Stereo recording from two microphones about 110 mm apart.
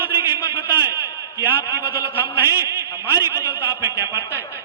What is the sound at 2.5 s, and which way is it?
A man's voice, 20° right (ahead or behind).